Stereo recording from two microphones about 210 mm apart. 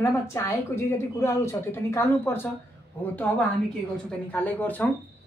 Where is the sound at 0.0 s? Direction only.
15° left (ahead or behind).